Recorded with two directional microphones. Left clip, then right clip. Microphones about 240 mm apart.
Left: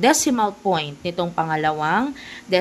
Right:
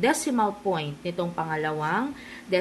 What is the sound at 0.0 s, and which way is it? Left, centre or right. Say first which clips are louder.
Speech: left 6 dB; left.